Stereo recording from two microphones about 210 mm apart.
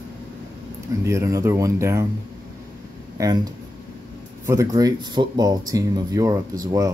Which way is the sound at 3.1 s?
20° right (ahead or behind).